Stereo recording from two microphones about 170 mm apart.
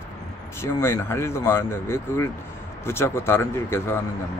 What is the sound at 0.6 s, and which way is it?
Speech, 15° left (ahead or behind).